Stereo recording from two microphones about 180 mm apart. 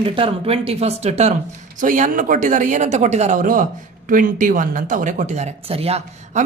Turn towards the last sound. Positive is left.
turn(degrees=-35)  # may be behind; listen again after turning